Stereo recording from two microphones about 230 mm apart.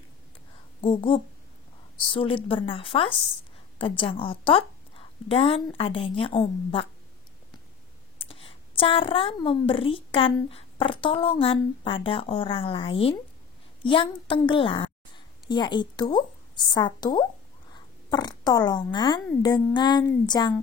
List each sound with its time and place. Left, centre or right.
0.7 s speech: left
8.2 s a woman's voice: left